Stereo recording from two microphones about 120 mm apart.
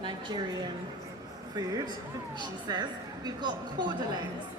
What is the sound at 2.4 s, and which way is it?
A woman's voice, 35° right (ahead or behind).